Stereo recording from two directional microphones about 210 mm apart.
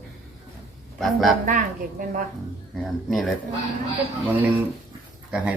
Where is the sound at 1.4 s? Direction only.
40° right (ahead or behind).